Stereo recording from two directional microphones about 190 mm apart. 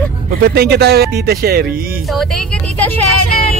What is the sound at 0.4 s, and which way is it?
Speech, 60° right (ahead or behind).